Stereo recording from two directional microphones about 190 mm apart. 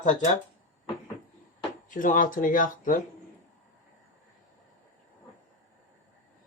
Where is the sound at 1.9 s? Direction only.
45° left (ahead or behind).